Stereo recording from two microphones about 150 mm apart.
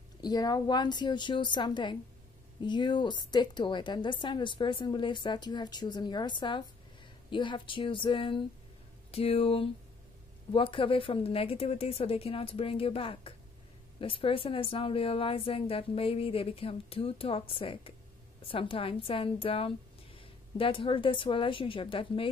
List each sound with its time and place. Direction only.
0.2 s a woman's voice: 25° left (ahead or behind)